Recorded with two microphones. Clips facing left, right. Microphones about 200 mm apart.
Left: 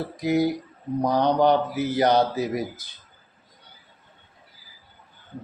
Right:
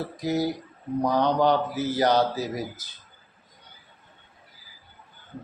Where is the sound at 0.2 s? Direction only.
15° left (ahead or behind).